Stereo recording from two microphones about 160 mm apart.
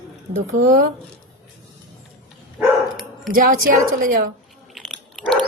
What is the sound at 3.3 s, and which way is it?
Speech, 60° right (ahead or behind).